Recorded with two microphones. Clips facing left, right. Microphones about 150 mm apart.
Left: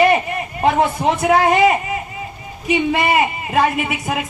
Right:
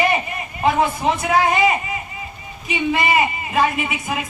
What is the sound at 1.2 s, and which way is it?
Speech, 55° left (ahead or behind).